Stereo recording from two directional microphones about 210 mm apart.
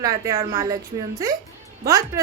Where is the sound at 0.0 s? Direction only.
15° right (ahead or behind).